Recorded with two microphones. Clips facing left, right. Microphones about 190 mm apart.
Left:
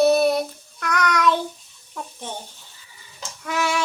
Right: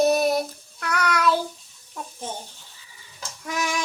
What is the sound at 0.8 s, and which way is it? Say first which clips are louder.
Child singing: left 2 dB; 35° right (ahead or behind).